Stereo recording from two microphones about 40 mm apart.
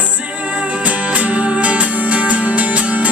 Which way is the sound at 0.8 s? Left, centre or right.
Right.